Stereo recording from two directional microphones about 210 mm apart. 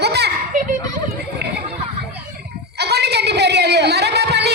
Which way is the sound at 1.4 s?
50° right (ahead or behind).